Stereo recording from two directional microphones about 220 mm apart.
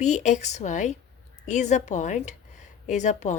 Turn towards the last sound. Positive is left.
turn(degrees=30)  # may be behind; listen again after turning